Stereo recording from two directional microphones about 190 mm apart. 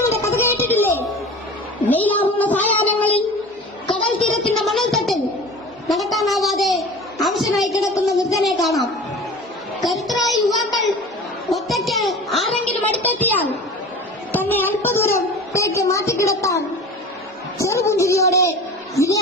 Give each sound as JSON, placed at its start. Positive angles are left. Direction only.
{"t": 0.3, "sound": "a sound", "side_deg": 10}
{"t": 1.9, "sound": "child singing", "side_deg": 10}
{"t": 4.4, "sound": "music", "side_deg": 0}
{"t": 5.9, "sound": "a sound", "side_deg": 0}
{"t": 7.7, "sound": "a woman's voice", "side_deg": 15}
{"t": 8.3, "sound": "a woman's voice", "side_deg": 0}
{"t": 9.8, "sound": "music", "side_deg": 0}
{"t": 11.4, "sound": "a sound", "side_deg": 0}
{"t": 14.3, "sound": "a woman's voice", "side_deg": 10}
{"t": 17.6, "sound": "a woman's voice", "side_deg": 15}